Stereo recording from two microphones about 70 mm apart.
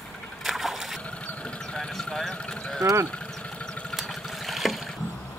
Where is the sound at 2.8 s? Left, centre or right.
Right.